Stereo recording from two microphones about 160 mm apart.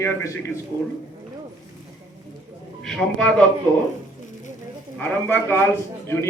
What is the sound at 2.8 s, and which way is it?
Speech, 5° left (ahead or behind).